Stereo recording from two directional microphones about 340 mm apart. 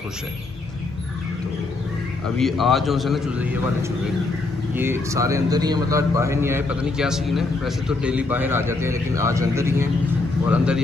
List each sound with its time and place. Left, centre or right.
2.3 s a man's voice: centre